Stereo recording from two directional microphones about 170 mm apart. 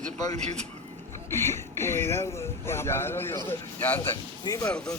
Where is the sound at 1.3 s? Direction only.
15° left (ahead or behind).